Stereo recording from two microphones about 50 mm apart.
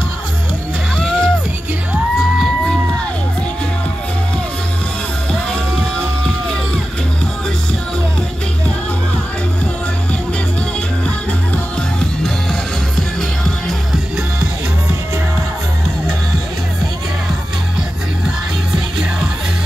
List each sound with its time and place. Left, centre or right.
0.9 s music: centre
5.3 s music: centre